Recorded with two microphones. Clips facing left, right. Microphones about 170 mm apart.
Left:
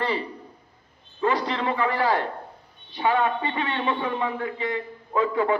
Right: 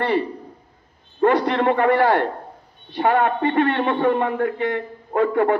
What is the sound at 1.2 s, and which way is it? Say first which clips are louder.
A man's voice: right 7 dB; 60° right (ahead or behind).